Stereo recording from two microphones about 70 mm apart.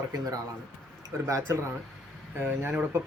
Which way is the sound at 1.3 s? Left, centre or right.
Right.